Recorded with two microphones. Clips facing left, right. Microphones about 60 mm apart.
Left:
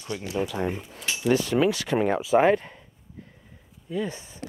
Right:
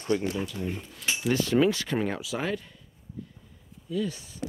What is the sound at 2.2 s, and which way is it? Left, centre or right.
Speech, left.